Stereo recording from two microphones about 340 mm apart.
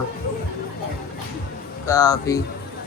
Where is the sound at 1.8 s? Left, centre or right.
Centre.